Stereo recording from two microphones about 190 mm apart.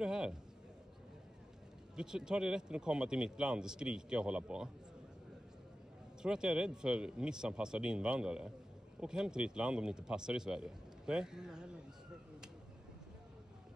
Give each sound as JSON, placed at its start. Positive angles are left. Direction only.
{"t": 0.0, "sound": "a sound", "side_deg": -5}
{"t": 2.0, "sound": "speech", "side_deg": -5}
{"t": 6.2, "sound": "speech", "side_deg": -5}